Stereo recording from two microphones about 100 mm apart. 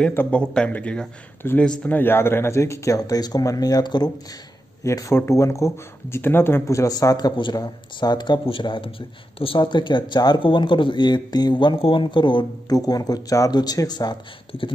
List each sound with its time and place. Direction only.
0.1 s speech: 20° left (ahead or behind); by 8.4 s 45° left (ahead or behind)
8.5 s speech: 60° left (ahead or behind)
12.7 s speech: 40° left (ahead or behind)